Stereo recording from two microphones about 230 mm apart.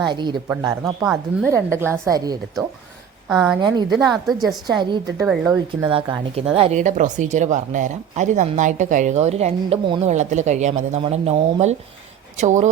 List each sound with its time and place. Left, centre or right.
0.1 s speech: centre
3.2 s speech: centre
4.8 s speech: centre
5.2 s speech: centre
5.5 s speech: centre